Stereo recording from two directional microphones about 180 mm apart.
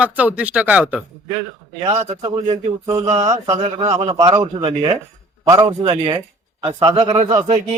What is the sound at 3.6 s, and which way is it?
A man's voice, 35° right (ahead or behind).